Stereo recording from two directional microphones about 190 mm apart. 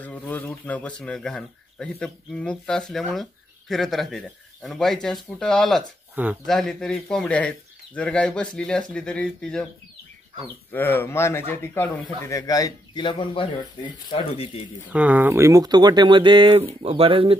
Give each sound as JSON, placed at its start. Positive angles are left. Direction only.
{"t": 0.0, "sound": "speech", "side_deg": 10}
{"t": 10.7, "sound": "speech", "side_deg": 10}
{"t": 14.9, "sound": "speech", "side_deg": -5}